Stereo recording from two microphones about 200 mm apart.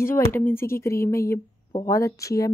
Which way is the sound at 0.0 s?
10° left (ahead or behind).